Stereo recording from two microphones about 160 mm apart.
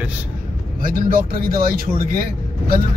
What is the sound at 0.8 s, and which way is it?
Speech, 60° right (ahead or behind).